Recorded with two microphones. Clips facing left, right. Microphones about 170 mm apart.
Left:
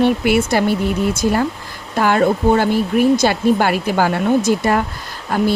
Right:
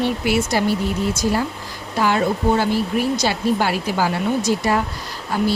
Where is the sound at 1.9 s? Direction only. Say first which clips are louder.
Left 4 dB; 55° left (ahead or behind).